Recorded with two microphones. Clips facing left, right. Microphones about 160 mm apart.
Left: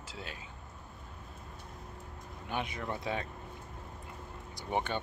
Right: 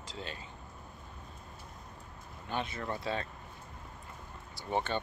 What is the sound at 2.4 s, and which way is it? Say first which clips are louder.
Speech: even; 15° left (ahead or behind).